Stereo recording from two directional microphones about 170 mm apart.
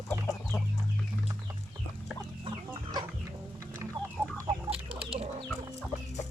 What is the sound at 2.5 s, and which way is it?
Chicken, 25° right (ahead or behind).